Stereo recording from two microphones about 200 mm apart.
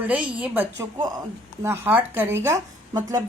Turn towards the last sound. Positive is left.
turn(degrees=-15)  # may be behind; listen again after turning